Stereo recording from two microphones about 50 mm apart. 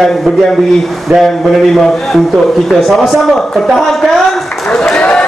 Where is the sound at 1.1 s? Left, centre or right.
Right.